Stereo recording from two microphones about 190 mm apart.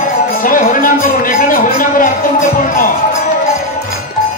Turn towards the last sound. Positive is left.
turn(degrees=45)  # may be behind; listen again after turning